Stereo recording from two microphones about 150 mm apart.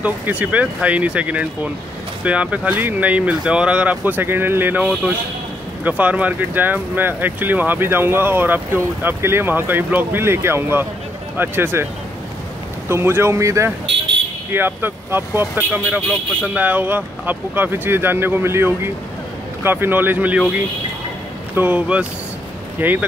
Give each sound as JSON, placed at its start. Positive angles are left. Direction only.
{"t": 0.0, "sound": "speech", "side_deg": -10}